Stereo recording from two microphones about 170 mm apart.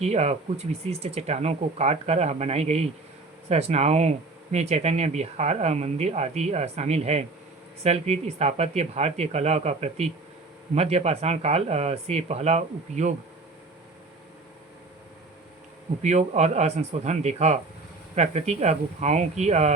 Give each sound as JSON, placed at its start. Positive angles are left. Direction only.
{"t": 0.0, "sound": "speech", "side_deg": -40}
{"t": 16.0, "sound": "speech", "side_deg": -40}